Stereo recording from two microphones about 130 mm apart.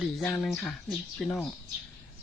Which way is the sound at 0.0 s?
10° left (ahead or behind).